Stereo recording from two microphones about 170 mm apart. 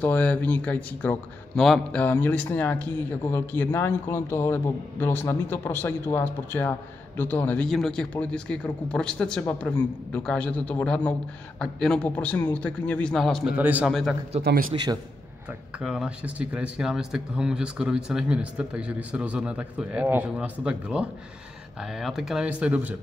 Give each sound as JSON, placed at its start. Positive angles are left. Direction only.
{"t": 0.0, "sound": "a man's voice", "side_deg": 10}
{"t": 13.6, "sound": "a man's voice", "side_deg": -10}
{"t": 14.4, "sound": "speech", "side_deg": -60}
{"t": 15.8, "sound": "a man's voice", "side_deg": -5}